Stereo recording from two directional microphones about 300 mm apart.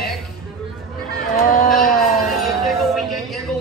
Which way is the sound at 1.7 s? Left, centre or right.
Centre.